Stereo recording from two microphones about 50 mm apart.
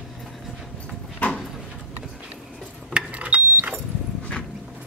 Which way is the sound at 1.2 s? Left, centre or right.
Left.